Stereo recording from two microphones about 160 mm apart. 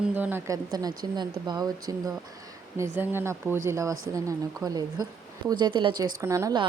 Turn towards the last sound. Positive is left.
turn(degrees=-20)  # may be behind; listen again after turning